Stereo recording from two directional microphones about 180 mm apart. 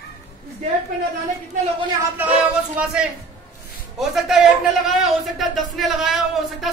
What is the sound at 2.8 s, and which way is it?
Speech, 10° right (ahead or behind).